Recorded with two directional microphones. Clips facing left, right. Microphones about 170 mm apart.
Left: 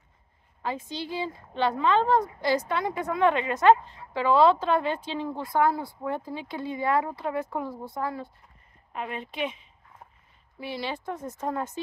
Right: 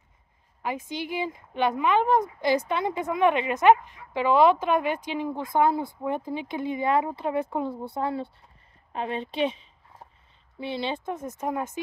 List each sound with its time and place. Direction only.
0.6 s speech: 15° right (ahead or behind)
8.9 s a sound: 30° right (ahead or behind)
10.6 s speech: 25° right (ahead or behind)